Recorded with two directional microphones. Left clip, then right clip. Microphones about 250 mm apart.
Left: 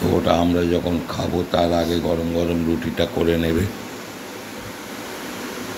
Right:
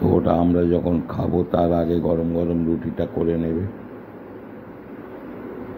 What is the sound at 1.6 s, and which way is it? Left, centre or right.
Speech, centre.